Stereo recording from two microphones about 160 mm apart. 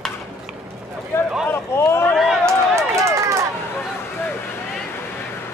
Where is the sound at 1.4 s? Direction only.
15° left (ahead or behind).